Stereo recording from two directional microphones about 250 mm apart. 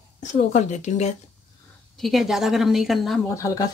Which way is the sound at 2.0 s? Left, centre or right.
Centre.